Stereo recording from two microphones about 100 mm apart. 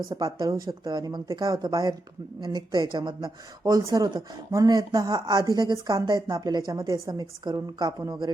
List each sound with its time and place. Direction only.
0.1 s a woman's voice: 35° right (ahead or behind)